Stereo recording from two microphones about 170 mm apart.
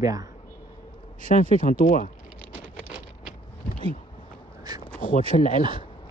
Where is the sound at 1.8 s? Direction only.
55° left (ahead or behind).